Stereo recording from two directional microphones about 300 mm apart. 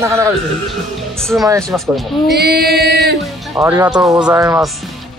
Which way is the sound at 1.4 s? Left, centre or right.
Centre.